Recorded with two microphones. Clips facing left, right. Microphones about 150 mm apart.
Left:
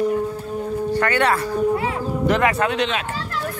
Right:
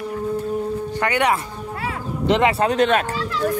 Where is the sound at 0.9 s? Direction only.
15° right (ahead or behind).